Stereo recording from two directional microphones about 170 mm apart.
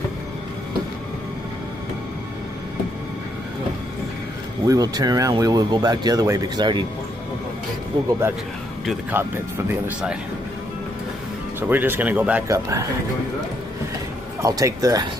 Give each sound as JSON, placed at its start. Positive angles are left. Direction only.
{"t": 4.6, "sound": "speech", "side_deg": -20}
{"t": 9.1, "sound": "speech", "side_deg": -10}
{"t": 11.7, "sound": "speech", "side_deg": -10}
{"t": 14.4, "sound": "speech", "side_deg": -20}